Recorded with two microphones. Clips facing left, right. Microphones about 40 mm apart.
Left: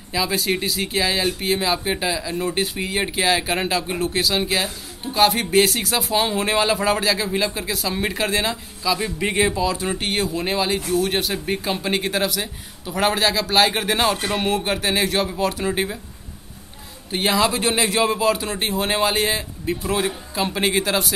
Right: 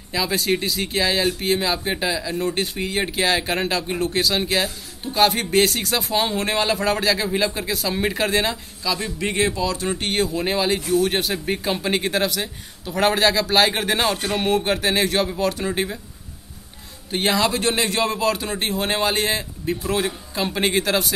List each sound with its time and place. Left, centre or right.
0.1 s speech: centre
17.1 s speech: centre